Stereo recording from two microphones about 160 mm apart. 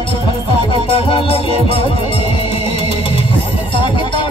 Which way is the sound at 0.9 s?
35° left (ahead or behind).